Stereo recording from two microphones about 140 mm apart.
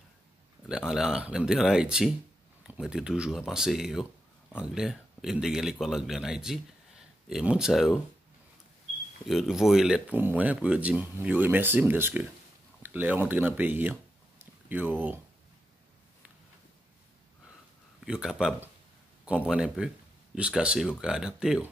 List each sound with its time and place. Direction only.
0.7 s speech: 5° right (ahead or behind)
9.3 s speech: centre (ahead or behind)
14.4 s a sound: 15° right (ahead or behind)
18.0 s speech: 5° right (ahead or behind)